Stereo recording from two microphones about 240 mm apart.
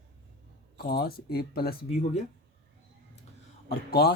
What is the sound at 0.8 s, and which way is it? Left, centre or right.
Speech, left.